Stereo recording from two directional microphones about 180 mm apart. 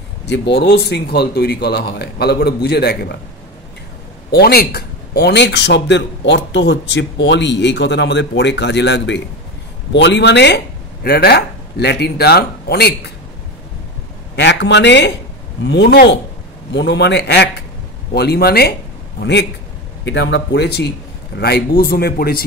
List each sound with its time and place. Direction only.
0.3 s speech: 75° left (ahead or behind)
4.3 s speech: 60° left (ahead or behind)
11.1 s speech: 60° left (ahead or behind)
14.3 s a man's voice: 75° left (ahead or behind)
20.1 s speech: 80° left; by 22.4 s 55° left (ahead or behind)